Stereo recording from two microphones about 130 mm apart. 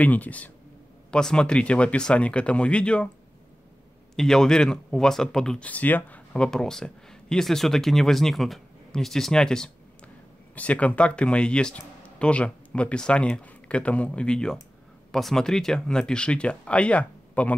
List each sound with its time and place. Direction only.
0.0 s speech: 10° left (ahead or behind)
4.1 s speech: 5° left (ahead or behind)